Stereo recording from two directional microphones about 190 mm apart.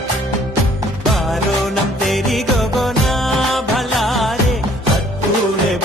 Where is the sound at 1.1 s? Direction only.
Centre (ahead or behind).